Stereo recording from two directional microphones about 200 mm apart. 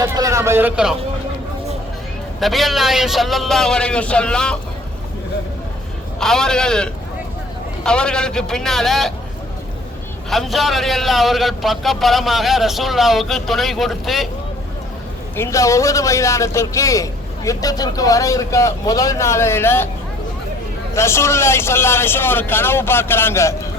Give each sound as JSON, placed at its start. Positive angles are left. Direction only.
{"t": 0.0, "sound": "speech", "side_deg": -15}
{"t": 2.4, "sound": "a man's voice", "side_deg": 0}
{"t": 6.1, "sound": "a man's voice", "side_deg": 0}
{"t": 10.2, "sound": "a man's voice", "side_deg": 0}
{"t": 15.4, "sound": "a man's voice", "side_deg": 15}
{"t": 20.9, "sound": "a man's voice", "side_deg": 15}